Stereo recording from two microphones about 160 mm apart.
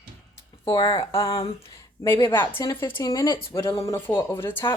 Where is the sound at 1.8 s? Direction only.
15° left (ahead or behind).